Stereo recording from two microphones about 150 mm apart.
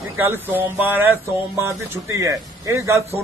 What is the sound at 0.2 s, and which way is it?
A man's voice, 15° right (ahead or behind).